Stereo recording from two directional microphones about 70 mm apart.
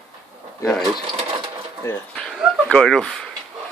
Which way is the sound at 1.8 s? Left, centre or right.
Left.